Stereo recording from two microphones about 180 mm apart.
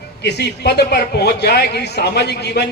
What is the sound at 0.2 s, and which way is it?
A man's voice, 70° left (ahead or behind).